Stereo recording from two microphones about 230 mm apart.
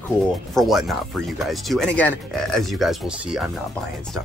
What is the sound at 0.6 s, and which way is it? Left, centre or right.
Speech, centre.